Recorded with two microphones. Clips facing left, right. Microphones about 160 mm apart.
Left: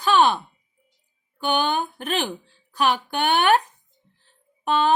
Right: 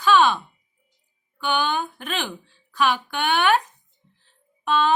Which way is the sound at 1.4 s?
40° left (ahead or behind).